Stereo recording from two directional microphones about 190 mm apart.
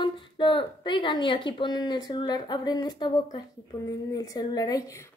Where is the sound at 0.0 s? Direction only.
25° left (ahead or behind).